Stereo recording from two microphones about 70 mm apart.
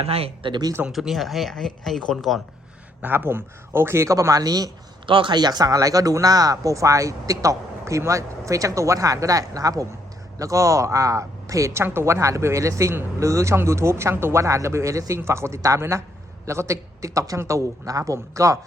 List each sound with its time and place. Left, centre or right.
0.9 s speech: centre
3.0 s speech: right
5.3 s speech: right
5.7 s speech: right